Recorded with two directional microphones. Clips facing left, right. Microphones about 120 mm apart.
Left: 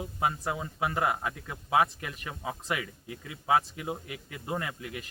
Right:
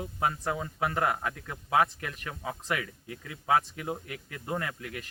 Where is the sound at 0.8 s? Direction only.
20° left (ahead or behind).